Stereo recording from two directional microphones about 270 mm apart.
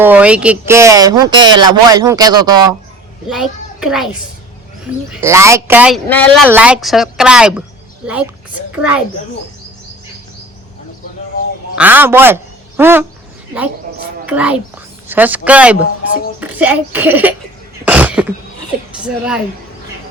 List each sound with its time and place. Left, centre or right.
0.0 s speech: centre
3.2 s a child's voice: centre
5.2 s a child's voice: centre
11.8 s speech: centre
13.9 s music: right
14.3 s speech: centre
17.8 s a sound: centre
19.0 s speech: centre